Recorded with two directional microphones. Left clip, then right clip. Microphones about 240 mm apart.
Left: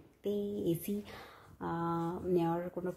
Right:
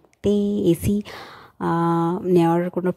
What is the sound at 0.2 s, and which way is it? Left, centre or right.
Speech, right.